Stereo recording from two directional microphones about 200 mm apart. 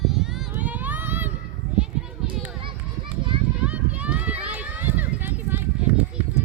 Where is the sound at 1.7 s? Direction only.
5° right (ahead or behind).